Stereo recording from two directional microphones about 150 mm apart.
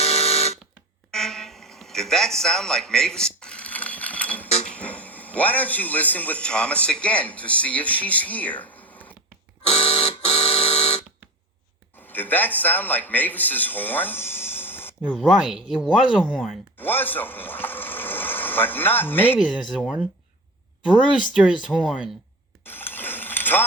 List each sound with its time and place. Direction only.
0.0 s fire alarm: 45° left (ahead or behind)
1.1 s a sound: 5° left (ahead or behind)
4.6 s a man's voice: 10° left (ahead or behind)
9.6 s a sound: 40° left (ahead or behind)
11.9 s speech: 10° left (ahead or behind)
15.2 s speech: centre (ahead or behind)
16.7 s speech: 15° left (ahead or behind)
19.4 s speech: 5° right (ahead or behind)
21.7 s speech: 5° right (ahead or behind)
22.6 s a sound: 15° left (ahead or behind)